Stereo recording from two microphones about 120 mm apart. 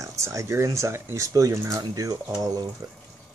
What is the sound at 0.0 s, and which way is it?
Speech, 25° right (ahead or behind).